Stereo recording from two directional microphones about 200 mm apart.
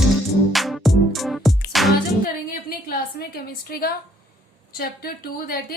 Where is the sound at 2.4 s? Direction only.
45° left (ahead or behind).